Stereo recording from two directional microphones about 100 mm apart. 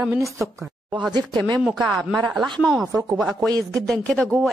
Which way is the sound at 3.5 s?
35° right (ahead or behind).